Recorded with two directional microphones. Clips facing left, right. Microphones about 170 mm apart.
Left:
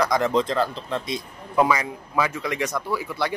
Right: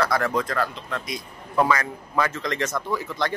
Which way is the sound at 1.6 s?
10° left (ahead or behind).